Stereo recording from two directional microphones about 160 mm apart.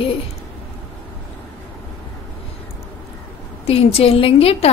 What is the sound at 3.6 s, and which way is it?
A woman's voice, 40° left (ahead or behind).